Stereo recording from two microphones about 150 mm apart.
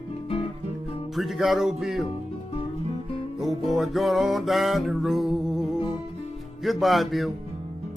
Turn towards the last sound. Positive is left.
turn(degrees=0)  # may be behind; listen again after turning